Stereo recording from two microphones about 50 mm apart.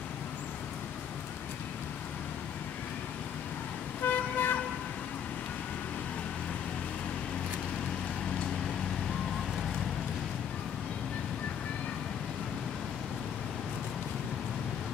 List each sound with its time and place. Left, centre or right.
4.0 s vehicle: left